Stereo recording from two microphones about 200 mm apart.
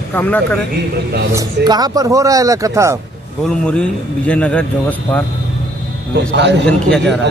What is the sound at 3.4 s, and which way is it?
A man's voice, 5° left (ahead or behind).